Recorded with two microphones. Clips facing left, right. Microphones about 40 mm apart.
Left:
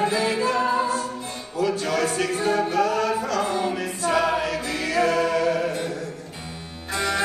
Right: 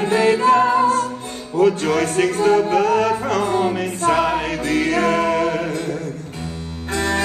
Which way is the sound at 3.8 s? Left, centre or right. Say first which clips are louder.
Right 5 dB; right.